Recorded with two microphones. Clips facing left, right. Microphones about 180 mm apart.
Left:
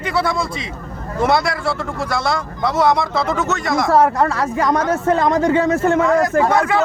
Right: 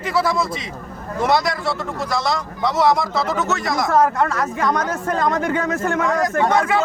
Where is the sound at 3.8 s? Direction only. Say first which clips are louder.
Left 2 dB; 30° left (ahead or behind).